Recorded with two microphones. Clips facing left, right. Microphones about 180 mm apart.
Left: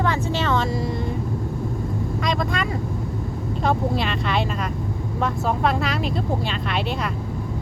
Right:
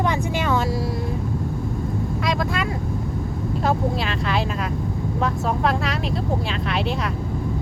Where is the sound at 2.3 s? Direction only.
5° right (ahead or behind).